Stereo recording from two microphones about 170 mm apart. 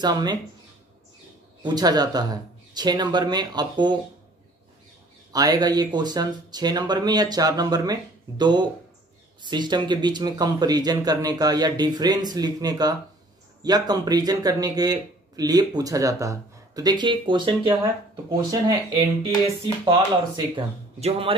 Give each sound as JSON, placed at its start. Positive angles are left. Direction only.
{"t": 0.0, "sound": "speech", "side_deg": -25}
{"t": 1.6, "sound": "speech", "side_deg": -25}
{"t": 5.3, "sound": "speech", "side_deg": -20}
{"t": 18.9, "sound": "speech", "side_deg": -30}